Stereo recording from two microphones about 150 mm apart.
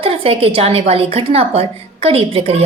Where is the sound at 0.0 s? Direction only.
40° right (ahead or behind).